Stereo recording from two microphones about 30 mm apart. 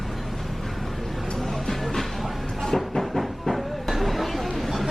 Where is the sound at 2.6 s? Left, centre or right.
Centre.